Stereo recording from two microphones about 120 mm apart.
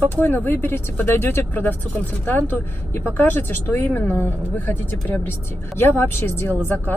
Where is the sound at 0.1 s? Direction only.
15° left (ahead or behind).